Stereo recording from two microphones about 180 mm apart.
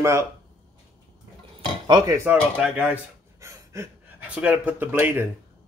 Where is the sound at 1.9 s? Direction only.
20° right (ahead or behind).